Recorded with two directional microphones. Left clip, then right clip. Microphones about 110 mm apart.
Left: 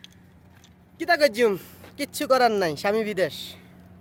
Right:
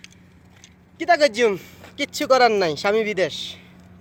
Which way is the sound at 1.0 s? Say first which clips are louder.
Right 3 dB; 20° left (ahead or behind).